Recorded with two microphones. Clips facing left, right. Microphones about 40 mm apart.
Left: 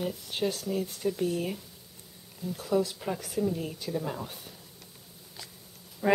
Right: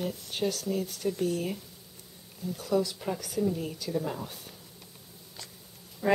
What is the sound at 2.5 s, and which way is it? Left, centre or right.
Speech, centre.